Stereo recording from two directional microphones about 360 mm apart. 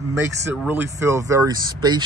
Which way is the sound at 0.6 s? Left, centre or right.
Centre.